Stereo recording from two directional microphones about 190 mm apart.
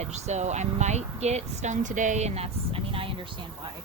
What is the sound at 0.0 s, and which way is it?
Speech, 35° right (ahead or behind).